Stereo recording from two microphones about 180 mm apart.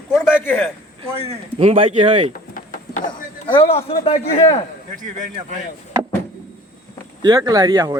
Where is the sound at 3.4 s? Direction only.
30° left (ahead or behind).